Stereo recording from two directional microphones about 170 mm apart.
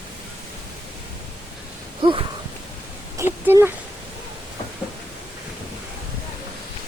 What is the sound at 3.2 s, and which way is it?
Speech, 15° right (ahead or behind).